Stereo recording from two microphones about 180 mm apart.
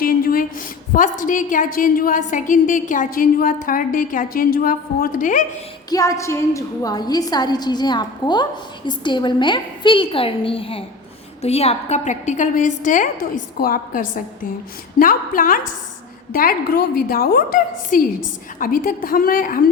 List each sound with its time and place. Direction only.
0.0 s a woman's voice: 55° left (ahead or behind)
5.9 s a woman's voice: 20° left (ahead or behind); by 19.6 s 50° left (ahead or behind)